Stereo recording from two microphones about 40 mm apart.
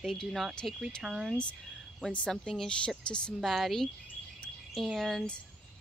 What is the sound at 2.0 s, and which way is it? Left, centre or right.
Speech, left.